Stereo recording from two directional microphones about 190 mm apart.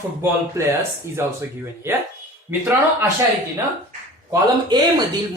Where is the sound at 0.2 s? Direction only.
15° right (ahead or behind).